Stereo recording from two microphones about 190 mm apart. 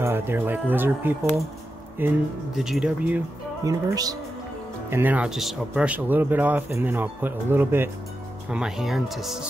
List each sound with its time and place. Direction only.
0.0 s speech: 10° right (ahead or behind)
3.6 s speech: 20° right (ahead or behind); by 9.4 s centre (ahead or behind)